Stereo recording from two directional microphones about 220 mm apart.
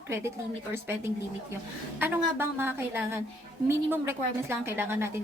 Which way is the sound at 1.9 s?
10° right (ahead or behind).